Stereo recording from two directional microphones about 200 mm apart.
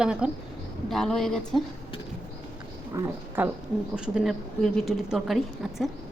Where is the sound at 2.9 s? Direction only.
15° right (ahead or behind).